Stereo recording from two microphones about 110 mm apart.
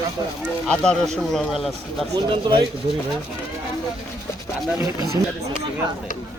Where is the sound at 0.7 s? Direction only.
5° left (ahead or behind).